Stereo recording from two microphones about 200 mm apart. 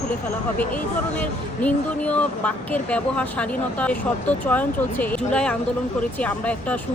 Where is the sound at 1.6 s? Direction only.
5° left (ahead or behind).